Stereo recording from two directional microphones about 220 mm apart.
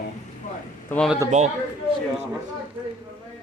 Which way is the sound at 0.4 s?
35° left (ahead or behind).